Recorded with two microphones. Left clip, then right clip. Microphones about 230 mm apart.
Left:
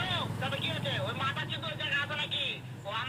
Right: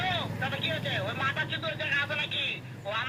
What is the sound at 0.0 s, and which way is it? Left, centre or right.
Vehicle, centre.